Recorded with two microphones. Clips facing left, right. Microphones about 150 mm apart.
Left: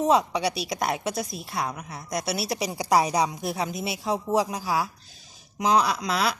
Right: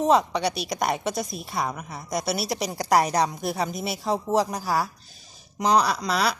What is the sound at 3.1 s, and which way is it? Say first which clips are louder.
Speech: right 1 dB; 5° left (ahead or behind).